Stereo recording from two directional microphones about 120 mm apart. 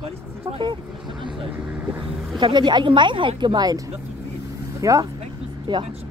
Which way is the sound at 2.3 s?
40° right (ahead or behind).